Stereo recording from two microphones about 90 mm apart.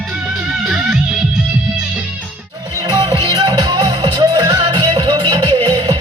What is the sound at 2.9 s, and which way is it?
Music, 50° right (ahead or behind).